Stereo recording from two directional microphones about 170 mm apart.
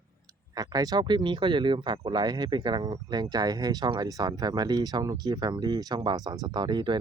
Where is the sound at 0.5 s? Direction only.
20° right (ahead or behind).